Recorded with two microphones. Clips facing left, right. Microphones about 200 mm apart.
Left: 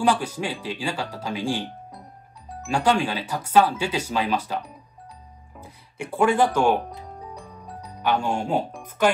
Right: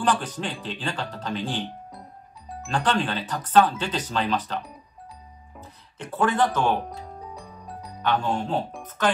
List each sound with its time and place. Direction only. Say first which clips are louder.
0.0 s speech: left 3 dB; 10° left (ahead or behind)
7.3 s music: even; centre (ahead or behind)
8.0 s speech: left 1 dB; 10° left (ahead or behind)